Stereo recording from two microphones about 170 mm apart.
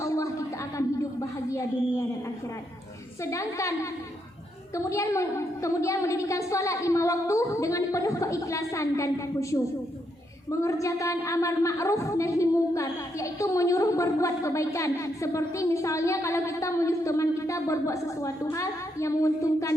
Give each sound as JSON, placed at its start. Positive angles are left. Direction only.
{"t": 0.0, "sound": "a sound", "side_deg": 20}
{"t": 3.2, "sound": "a woman's voice", "side_deg": 20}
{"t": 10.6, "sound": "a woman's voice", "side_deg": 20}